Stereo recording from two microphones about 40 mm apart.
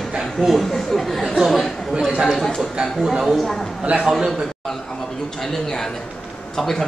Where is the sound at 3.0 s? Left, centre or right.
Centre.